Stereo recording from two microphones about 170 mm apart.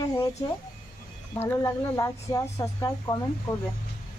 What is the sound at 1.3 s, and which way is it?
Speech, 15° left (ahead or behind).